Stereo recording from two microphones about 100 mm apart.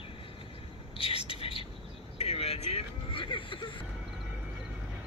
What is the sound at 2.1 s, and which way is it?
Vehicle, 90° left.